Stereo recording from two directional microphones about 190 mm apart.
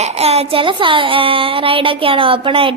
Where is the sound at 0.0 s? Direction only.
35° right (ahead or behind).